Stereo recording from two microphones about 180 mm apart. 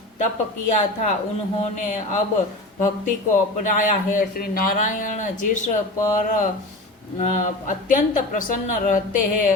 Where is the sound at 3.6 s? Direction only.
45° left (ahead or behind).